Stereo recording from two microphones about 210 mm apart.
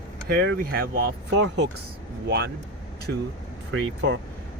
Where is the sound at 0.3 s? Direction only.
50° right (ahead or behind).